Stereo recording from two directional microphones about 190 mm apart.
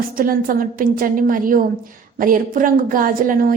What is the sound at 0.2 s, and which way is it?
A woman's voice, 50° right (ahead or behind).